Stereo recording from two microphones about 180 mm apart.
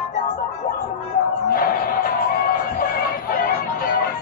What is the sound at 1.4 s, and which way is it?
Music, 55° left (ahead or behind).